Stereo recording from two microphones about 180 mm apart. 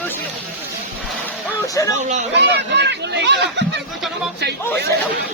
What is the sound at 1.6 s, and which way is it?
Music, 20° left (ahead or behind).